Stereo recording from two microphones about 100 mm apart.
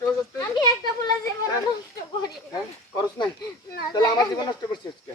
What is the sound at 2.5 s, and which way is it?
Snake, 40° left (ahead or behind).